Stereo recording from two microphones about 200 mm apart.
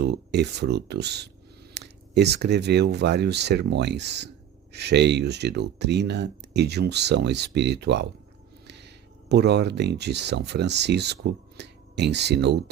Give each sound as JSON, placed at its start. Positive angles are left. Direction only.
{"t": 0.0, "sound": "speech", "side_deg": -55}
{"t": 8.6, "sound": "a sound", "side_deg": -55}
{"t": 9.3, "sound": "speech", "side_deg": -55}